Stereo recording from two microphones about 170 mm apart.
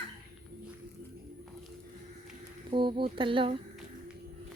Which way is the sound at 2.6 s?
30° right (ahead or behind).